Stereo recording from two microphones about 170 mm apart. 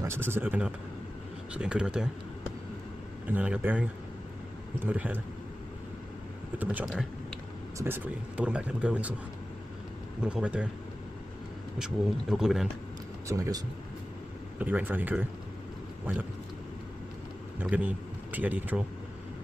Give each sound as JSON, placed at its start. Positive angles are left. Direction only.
{"t": 0.0, "sound": "speech", "side_deg": -15}
{"t": 3.3, "sound": "speech", "side_deg": -10}
{"t": 4.8, "sound": "speech", "side_deg": -10}
{"t": 6.6, "sound": "speech", "side_deg": -10}
{"t": 10.2, "sound": "speech", "side_deg": -5}
{"t": 11.8, "sound": "speech", "side_deg": 0}
{"t": 13.3, "sound": "speech", "side_deg": -20}
{"t": 17.6, "sound": "a man's voice", "side_deg": -10}